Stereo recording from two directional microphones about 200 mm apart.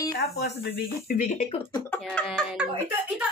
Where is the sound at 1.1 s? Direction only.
45° left (ahead or behind).